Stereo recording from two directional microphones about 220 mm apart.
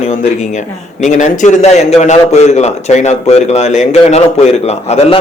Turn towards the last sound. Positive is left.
turn(degrees=30)  # may be behind; listen again after turning